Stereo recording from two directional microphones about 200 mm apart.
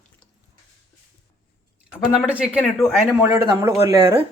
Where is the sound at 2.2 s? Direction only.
5° right (ahead or behind).